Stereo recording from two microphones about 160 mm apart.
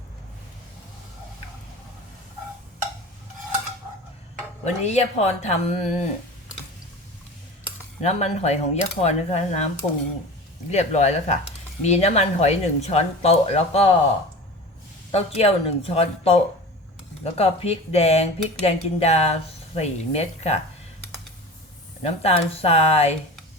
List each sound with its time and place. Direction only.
4.6 s speech: 45° left (ahead or behind)
8.0 s speech: 45° left (ahead or behind)
10.7 s speech: 45° left (ahead or behind)
15.1 s speech: 40° left (ahead or behind)
22.0 s speech: 40° left (ahead or behind)